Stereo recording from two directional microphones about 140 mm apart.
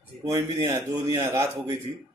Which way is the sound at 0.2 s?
25° right (ahead or behind).